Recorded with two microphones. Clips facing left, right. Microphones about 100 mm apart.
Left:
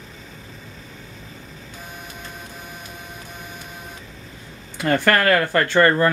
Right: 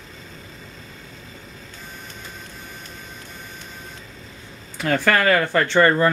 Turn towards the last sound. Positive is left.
turn(degrees=0)  # may be behind; listen again after turning